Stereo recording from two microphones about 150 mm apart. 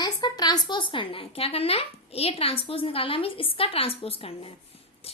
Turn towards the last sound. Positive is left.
turn(degrees=40)  # may be behind; listen again after turning